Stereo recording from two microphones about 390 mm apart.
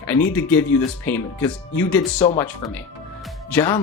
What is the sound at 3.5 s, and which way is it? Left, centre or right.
Speech, centre.